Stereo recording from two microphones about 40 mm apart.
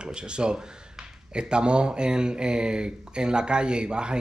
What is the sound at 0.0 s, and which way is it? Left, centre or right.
Speech, right.